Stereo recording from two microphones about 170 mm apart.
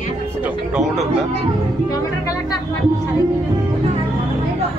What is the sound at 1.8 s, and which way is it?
Music, 20° left (ahead or behind).